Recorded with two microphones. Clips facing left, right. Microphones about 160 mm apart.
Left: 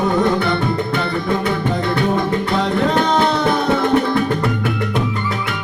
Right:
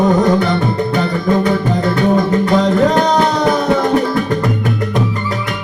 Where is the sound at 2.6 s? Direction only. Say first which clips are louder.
Right 4 dB; 40° right (ahead or behind).